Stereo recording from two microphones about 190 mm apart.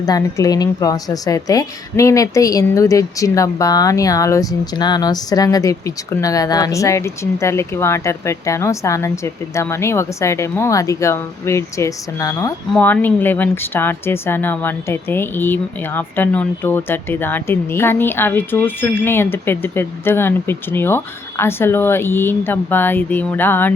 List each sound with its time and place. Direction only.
0.0 s a woman's voice: 15° left (ahead or behind)